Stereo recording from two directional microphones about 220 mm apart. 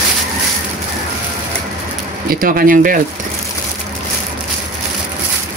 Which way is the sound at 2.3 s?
40° right (ahead or behind).